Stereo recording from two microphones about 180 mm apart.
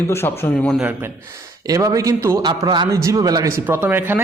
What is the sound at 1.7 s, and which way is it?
A man's voice, 20° right (ahead or behind).